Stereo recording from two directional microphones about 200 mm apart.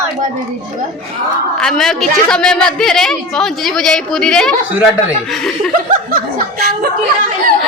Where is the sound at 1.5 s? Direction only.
5° left (ahead or behind).